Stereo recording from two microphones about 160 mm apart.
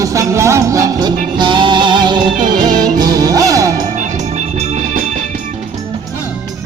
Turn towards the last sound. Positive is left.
turn(degrees=-45)  # may be behind; listen again after turning